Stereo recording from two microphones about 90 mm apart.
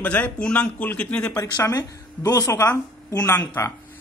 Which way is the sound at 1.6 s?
45° left (ahead or behind).